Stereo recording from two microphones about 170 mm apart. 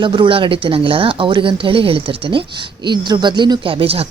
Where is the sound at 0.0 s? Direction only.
30° right (ahead or behind).